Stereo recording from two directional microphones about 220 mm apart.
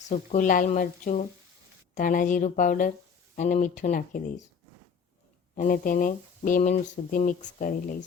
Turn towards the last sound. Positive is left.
turn(degrees=40)  # may be behind; listen again after turning